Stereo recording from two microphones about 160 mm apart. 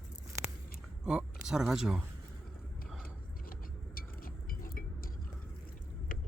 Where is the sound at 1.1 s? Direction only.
5° right (ahead or behind).